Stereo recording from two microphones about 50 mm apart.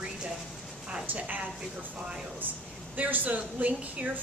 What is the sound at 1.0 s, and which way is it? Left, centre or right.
Speech, right.